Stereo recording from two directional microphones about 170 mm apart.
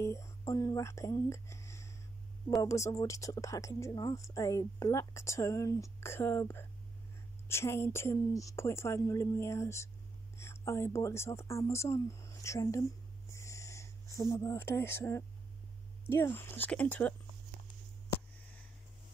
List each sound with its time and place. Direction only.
0.0 s speech: 15° left (ahead or behind)
13.3 s owl: 15° left (ahead or behind)
14.1 s speech: 15° left (ahead or behind)
16.3 s speech: 10° left (ahead or behind)